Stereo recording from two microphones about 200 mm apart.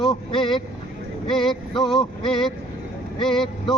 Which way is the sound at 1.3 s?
Centre (ahead or behind).